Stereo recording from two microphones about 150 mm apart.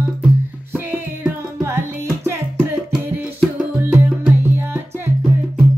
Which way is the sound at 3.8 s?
15° right (ahead or behind).